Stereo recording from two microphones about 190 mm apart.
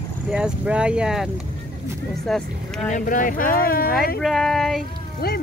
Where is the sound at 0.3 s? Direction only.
5° right (ahead or behind).